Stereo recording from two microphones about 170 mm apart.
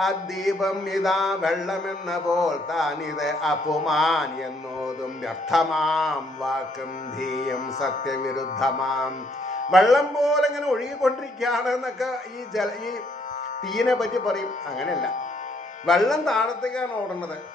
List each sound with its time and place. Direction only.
0.0 s mantra: centre (ahead or behind)
7.2 s music: 45° left (ahead or behind)
8.5 s mantra: centre (ahead or behind)